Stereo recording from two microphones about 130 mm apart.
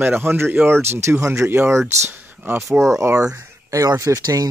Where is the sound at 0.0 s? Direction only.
15° right (ahead or behind).